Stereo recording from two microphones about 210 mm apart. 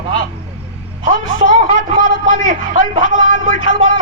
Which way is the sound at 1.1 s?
70° left (ahead or behind).